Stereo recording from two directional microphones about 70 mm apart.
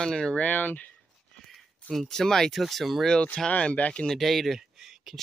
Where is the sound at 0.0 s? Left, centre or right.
Centre.